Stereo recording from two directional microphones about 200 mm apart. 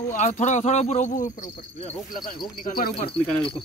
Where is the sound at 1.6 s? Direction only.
30° left (ahead or behind).